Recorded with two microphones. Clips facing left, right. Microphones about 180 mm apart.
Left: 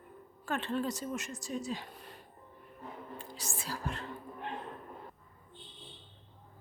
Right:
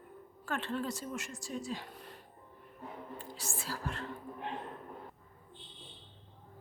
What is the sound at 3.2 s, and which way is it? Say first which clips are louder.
Speech: even; 15° left (ahead or behind).